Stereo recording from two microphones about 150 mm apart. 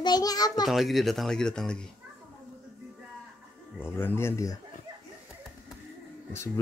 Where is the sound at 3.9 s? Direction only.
15° left (ahead or behind).